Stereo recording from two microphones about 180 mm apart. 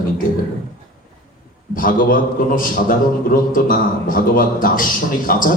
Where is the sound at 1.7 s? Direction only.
50° left (ahead or behind).